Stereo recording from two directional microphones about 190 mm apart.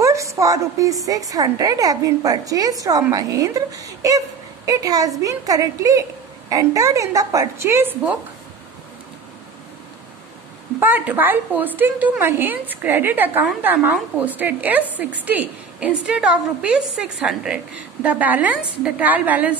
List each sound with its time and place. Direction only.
0.0 s a woman's voice: 15° right (ahead or behind)
10.8 s a woman's voice: 10° right (ahead or behind)